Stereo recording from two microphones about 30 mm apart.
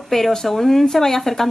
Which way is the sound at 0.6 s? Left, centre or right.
Centre.